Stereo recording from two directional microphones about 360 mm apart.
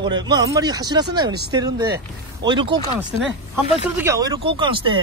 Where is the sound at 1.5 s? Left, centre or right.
Centre.